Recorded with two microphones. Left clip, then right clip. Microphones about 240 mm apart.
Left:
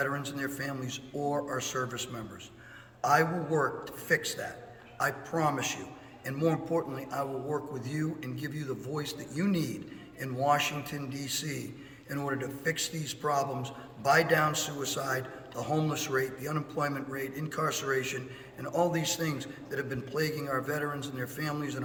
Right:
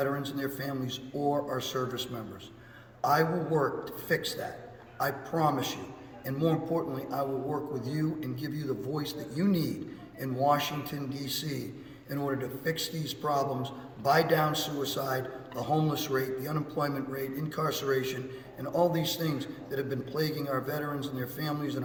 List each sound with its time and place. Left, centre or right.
0.3 s a man's voice: centre
4.9 s a man's voice: centre